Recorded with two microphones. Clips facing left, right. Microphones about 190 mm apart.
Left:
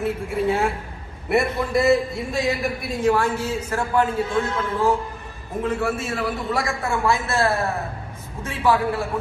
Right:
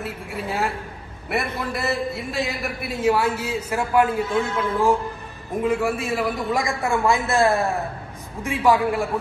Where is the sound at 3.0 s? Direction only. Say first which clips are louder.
Even; 10° right (ahead or behind).